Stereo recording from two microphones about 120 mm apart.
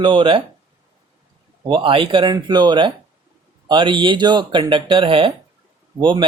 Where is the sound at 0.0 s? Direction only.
40° right (ahead or behind).